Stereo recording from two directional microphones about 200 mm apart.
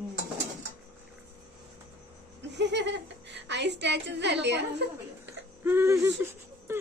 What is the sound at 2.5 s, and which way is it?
Speech, 60° right (ahead or behind).